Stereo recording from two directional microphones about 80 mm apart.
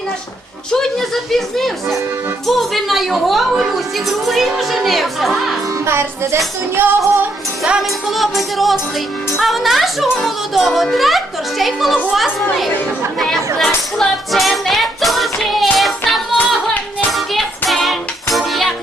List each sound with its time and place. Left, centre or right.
0.7 s speech: centre
5.8 s music: right
7.6 s speech: centre
13.6 s music: centre